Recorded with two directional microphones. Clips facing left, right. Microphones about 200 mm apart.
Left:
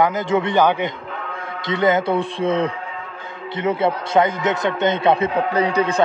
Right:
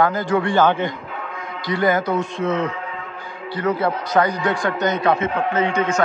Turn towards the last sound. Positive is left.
turn(degrees=35)  # may be behind; listen again after turning